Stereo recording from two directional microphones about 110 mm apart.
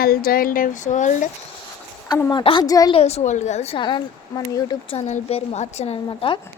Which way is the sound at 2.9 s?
70° left (ahead or behind).